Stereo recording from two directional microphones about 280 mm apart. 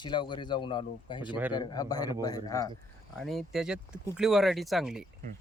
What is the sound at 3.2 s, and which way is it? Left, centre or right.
Speech, centre.